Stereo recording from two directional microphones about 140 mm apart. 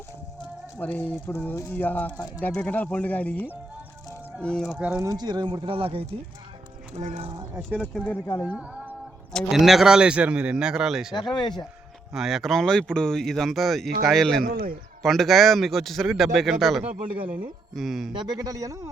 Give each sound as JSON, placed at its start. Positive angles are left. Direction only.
{"t": 0.8, "sound": "speech", "side_deg": 10}
{"t": 4.4, "sound": "speech", "side_deg": 5}
{"t": 4.8, "sound": "speech", "side_deg": -10}
{"t": 5.0, "sound": "speech", "side_deg": -30}
{"t": 7.5, "sound": "speech", "side_deg": -10}
{"t": 7.9, "sound": "speech", "side_deg": 10}
{"t": 8.4, "sound": "speech", "side_deg": -10}
{"t": 11.1, "sound": "speech", "side_deg": 35}
{"t": 12.1, "sound": "speech", "side_deg": 0}
{"t": 14.4, "sound": "speech", "side_deg": -90}
{"t": 15.0, "sound": "speech", "side_deg": 0}
{"t": 18.1, "sound": "speech", "side_deg": -30}